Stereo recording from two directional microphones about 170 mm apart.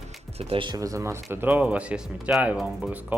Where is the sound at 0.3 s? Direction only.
35° right (ahead or behind).